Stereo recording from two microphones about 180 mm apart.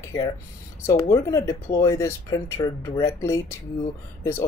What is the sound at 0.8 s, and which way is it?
Speech, 15° left (ahead or behind).